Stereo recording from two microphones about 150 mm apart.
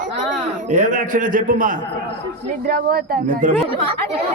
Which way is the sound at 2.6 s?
85° right.